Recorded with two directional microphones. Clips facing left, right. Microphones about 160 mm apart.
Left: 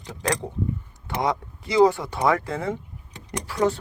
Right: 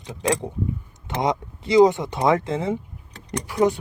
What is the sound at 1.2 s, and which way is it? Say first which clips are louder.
Speech: right 2 dB; 20° right (ahead or behind).